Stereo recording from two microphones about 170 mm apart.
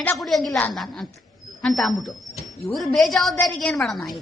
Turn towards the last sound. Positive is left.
turn(degrees=0)  # may be behind; listen again after turning